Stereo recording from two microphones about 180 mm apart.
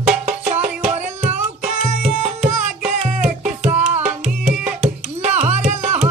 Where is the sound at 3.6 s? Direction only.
35° right (ahead or behind).